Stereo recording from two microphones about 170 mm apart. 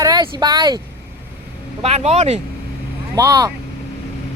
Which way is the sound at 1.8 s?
40° right (ahead or behind).